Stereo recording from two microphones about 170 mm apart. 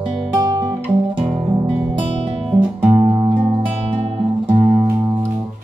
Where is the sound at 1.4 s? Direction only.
40° right (ahead or behind).